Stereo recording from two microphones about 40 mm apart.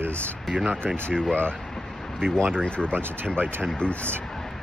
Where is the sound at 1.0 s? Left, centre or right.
Left.